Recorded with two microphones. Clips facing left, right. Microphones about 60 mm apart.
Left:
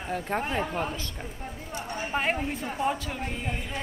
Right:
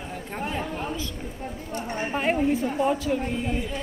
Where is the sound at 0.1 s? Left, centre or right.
Left.